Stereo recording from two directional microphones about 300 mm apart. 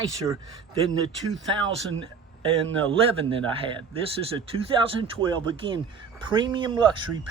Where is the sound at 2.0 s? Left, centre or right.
Centre.